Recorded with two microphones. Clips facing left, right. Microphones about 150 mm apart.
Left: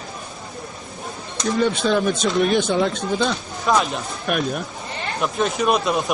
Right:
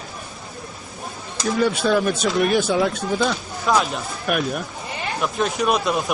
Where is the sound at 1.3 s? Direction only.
5° right (ahead or behind).